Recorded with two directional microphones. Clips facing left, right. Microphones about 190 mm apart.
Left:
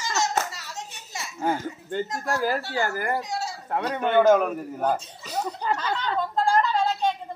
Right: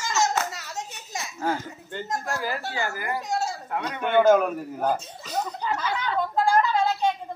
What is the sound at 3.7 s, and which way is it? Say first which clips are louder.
Speech: left 3 dB; 35° left (ahead or behind).